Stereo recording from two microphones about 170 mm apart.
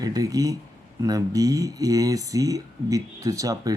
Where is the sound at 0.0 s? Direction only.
20° right (ahead or behind).